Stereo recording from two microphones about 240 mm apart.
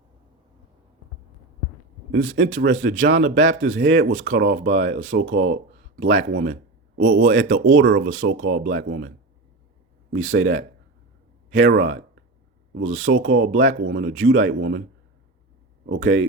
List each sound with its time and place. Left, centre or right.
2.1 s speech: right
8.1 s speech: right
15.9 s speech: right